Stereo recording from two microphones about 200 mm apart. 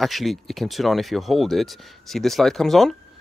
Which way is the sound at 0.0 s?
Centre (ahead or behind).